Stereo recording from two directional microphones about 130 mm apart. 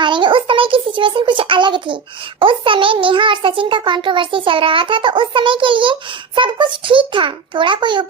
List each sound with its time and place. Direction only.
0.0 s a child's voice: 40° right (ahead or behind)